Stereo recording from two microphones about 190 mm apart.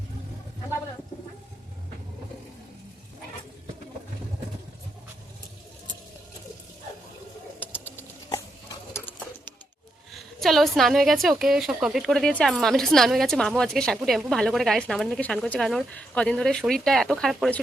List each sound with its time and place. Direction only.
7.6 s sewing machine: 10° left (ahead or behind)
10.2 s a woman's voice: centre (ahead or behind)